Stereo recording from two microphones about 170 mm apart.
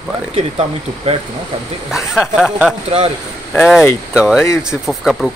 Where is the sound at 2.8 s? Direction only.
40° right (ahead or behind).